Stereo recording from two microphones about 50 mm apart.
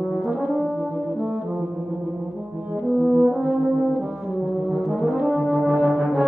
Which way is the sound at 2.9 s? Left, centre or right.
Right.